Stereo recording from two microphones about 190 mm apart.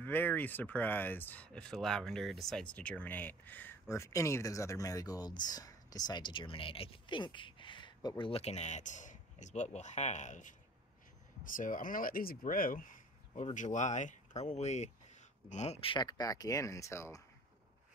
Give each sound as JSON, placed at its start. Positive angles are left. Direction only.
{"t": 0.0, "sound": "speech", "side_deg": 10}